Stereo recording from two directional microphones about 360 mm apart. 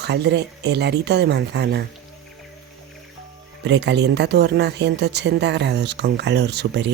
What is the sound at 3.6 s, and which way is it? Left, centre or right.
Speech, right.